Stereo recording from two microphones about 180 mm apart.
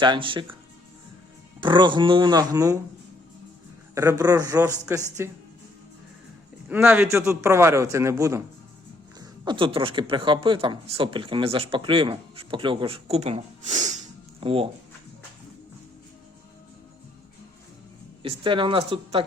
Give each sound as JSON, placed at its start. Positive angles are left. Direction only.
{"t": 0.0, "sound": "speech", "side_deg": -25}
{"t": 1.6, "sound": "speech", "side_deg": -25}
{"t": 3.9, "sound": "a man's voice", "side_deg": -15}
{"t": 6.7, "sound": "a man's voice", "side_deg": -10}
{"t": 14.4, "sound": "speech", "side_deg": -30}
{"t": 18.2, "sound": "speech", "side_deg": -30}